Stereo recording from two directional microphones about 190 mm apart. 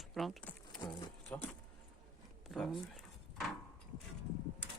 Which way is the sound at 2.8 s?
Centre (ahead or behind).